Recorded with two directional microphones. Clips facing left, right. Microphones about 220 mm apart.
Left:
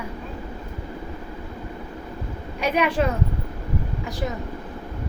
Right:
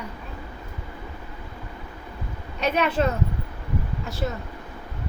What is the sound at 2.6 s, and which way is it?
Speech, 10° left (ahead or behind).